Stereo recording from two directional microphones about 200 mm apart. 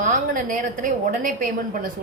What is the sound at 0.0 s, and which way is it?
A woman's voice, 40° right (ahead or behind).